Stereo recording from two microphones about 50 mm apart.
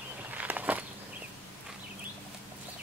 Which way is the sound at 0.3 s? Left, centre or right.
Right.